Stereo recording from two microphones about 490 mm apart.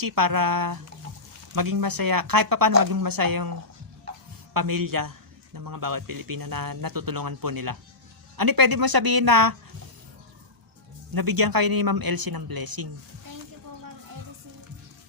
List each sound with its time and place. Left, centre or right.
0.0 s a man's voice: right
11.1 s a man's voice: right